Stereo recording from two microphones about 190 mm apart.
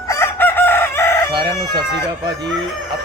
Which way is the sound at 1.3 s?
25° right (ahead or behind).